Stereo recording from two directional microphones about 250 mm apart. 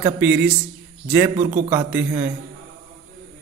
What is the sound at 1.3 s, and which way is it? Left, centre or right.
Speech, right.